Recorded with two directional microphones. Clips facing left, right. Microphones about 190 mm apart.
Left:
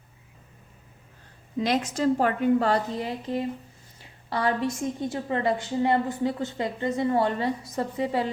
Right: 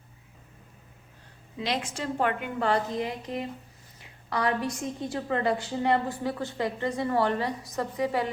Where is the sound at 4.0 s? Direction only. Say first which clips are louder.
Left 1 dB; 30° left (ahead or behind).